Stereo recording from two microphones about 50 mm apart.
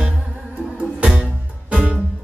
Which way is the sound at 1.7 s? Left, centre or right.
Right.